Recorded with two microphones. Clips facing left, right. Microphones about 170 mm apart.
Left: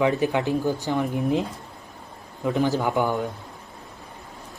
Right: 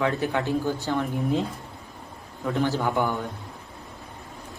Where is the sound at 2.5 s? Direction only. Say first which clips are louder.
Left 2 dB; 15° left (ahead or behind).